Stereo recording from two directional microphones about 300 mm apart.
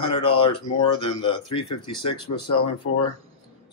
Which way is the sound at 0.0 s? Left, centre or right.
Centre.